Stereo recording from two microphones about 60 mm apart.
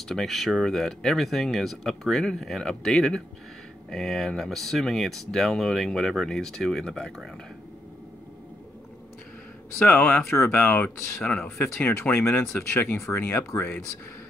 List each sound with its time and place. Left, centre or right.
0.1 s speech: centre
9.8 s speech: left